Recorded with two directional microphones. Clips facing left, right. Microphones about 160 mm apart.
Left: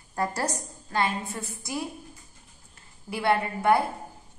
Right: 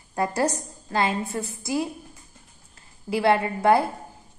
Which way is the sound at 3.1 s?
25° right (ahead or behind).